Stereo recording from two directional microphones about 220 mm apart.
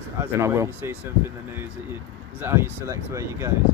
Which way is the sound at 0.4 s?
10° right (ahead or behind).